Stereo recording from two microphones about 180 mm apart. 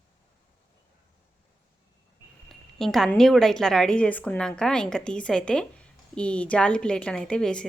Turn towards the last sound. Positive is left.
turn(degrees=5)  # may be behind; listen again after turning